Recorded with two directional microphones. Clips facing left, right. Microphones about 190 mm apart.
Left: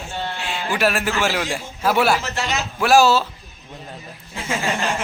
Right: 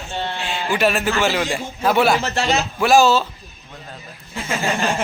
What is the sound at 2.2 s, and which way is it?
Speech, 30° right (ahead or behind).